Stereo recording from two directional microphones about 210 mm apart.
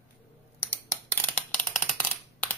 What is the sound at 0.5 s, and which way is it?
Coin, 10° left (ahead or behind).